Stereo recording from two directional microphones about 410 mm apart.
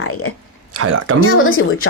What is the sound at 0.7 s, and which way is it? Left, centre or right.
Speech, right.